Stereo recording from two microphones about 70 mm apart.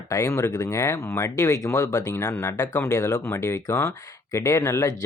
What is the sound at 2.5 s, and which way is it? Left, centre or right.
Speech, left.